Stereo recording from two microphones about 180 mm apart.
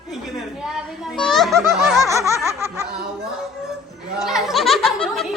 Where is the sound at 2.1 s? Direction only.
15° right (ahead or behind).